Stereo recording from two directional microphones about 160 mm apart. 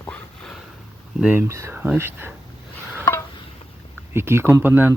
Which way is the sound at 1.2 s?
10° right (ahead or behind).